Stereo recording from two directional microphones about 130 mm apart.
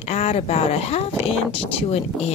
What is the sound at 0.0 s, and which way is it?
Speech, 55° left (ahead or behind).